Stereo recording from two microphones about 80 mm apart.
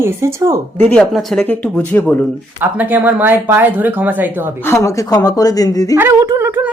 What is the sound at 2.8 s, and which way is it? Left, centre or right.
Speech, right.